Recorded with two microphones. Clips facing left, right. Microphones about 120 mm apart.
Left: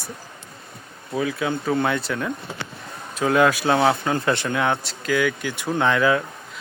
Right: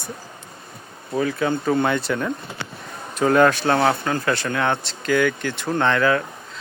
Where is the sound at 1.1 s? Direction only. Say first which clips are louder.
Right 2 dB; 5° left (ahead or behind).